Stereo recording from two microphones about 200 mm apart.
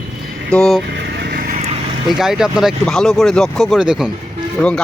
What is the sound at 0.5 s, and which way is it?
Speech, 5° left (ahead or behind).